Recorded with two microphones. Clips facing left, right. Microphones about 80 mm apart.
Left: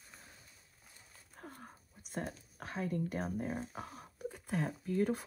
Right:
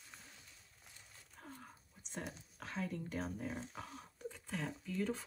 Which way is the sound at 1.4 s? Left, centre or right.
Left.